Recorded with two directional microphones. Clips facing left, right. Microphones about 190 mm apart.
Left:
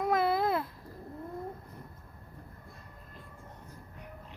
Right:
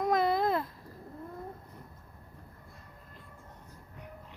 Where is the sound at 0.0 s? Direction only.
5° left (ahead or behind).